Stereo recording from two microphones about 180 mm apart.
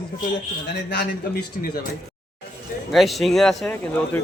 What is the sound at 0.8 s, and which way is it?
Speech, 70° left (ahead or behind).